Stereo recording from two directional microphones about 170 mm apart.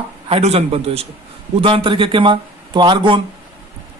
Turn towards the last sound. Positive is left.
turn(degrees=-30)  # may be behind; listen again after turning